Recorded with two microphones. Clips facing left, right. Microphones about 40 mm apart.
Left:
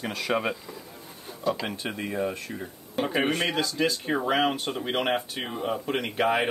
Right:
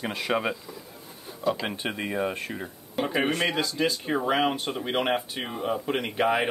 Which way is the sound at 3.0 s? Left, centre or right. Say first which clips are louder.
Even; centre.